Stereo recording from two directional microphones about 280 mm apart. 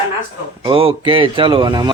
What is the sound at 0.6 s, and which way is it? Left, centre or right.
Speech, centre.